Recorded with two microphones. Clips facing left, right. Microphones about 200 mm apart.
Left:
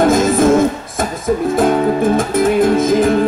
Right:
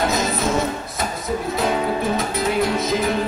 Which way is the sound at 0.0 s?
50° left (ahead or behind).